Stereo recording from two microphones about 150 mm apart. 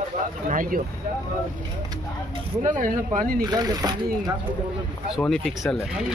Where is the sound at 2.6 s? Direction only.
60° right (ahead or behind).